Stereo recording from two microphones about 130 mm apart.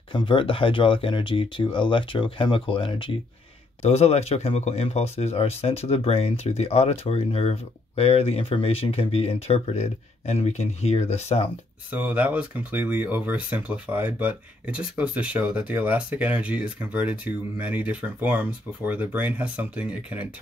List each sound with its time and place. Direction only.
0.1 s speech: 40° left (ahead or behind)
3.8 s speech: 55° left (ahead or behind)
11.9 s speech: 10° right (ahead or behind)